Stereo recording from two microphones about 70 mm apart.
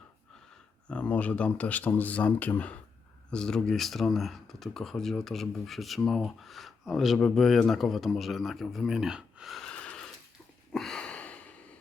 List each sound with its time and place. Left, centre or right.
0.9 s speech: centre
3.3 s speech: centre
9.7 s wheeze: centre
10.7 s a sound: centre